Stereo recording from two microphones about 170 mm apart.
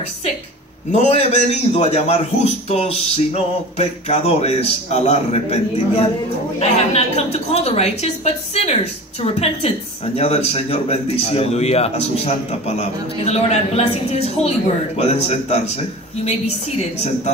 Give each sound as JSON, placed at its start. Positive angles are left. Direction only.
{"t": 0.9, "sound": "speech", "side_deg": 40}